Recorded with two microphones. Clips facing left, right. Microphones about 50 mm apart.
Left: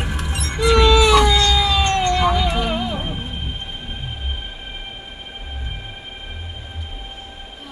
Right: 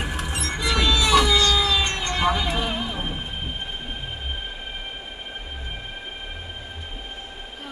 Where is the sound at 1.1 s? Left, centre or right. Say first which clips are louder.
Left 3 dB; centre.